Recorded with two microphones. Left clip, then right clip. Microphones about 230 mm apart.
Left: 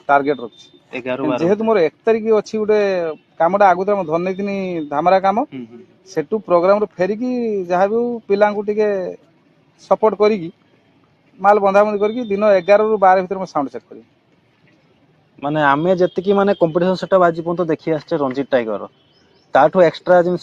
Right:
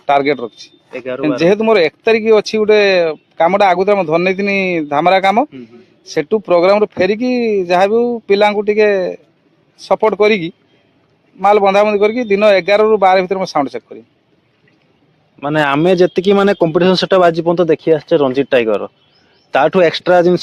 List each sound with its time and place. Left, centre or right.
0.0 s speech: right
0.9 s speech: centre
1.4 s speech: right
15.4 s a man's voice: right
15.7 s speech: right
16.1 s speech: right
17.7 s speech: right
19.5 s a man's voice: right
19.9 s speech: right